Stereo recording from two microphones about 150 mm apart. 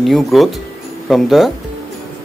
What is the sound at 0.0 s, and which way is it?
Speech, centre (ahead or behind).